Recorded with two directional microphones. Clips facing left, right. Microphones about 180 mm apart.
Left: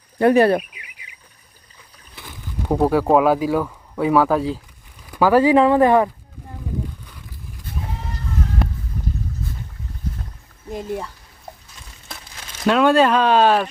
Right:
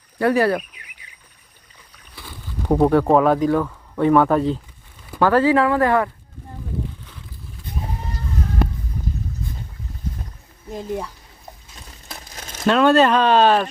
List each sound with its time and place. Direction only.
0.2 s speech: 25° left (ahead or behind)
2.6 s speech: 5° left (ahead or behind)
5.2 s speech: 15° left (ahead or behind)
8.6 s a sound: centre (ahead or behind)
10.7 s speech: 5° left (ahead or behind)
12.1 s crumpling: 45° right (ahead or behind)
12.6 s speech: 10° left (ahead or behind)